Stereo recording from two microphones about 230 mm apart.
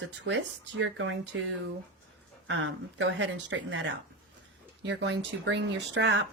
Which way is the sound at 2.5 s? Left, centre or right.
Right.